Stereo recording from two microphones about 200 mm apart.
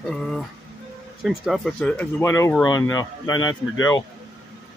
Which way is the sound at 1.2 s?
Centre (ahead or behind).